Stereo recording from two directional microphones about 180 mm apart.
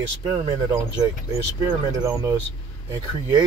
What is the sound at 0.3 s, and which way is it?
Speech, 20° right (ahead or behind).